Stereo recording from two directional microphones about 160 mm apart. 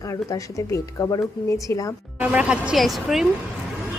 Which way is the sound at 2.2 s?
10° right (ahead or behind).